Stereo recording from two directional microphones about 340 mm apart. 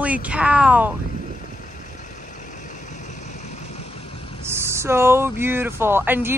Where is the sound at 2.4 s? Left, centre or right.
Left.